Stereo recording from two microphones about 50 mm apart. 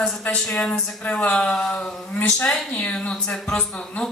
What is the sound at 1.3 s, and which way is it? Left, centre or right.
Speech, centre.